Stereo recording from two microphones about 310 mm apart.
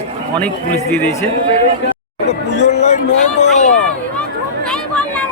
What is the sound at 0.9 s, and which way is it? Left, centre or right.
Speech, centre.